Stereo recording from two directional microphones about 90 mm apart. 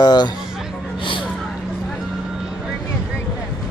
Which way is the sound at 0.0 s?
50° left (ahead or behind).